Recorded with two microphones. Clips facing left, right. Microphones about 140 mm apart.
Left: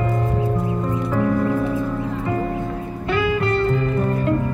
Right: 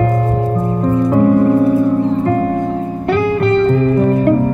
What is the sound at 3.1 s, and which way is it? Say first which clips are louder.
Music: right 6 dB; 55° right (ahead or behind).